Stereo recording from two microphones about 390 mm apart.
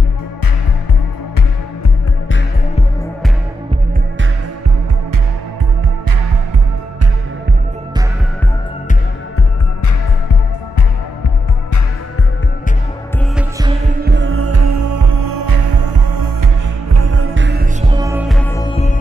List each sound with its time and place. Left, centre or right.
13.4 s music: centre
14.0 s music: right
16.9 s music: right
17.8 s music: centre